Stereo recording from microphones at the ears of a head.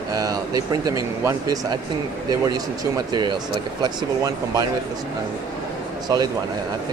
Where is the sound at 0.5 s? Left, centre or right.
Right.